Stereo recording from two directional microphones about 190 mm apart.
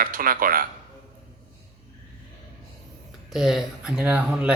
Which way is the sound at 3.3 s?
Centre (ahead or behind).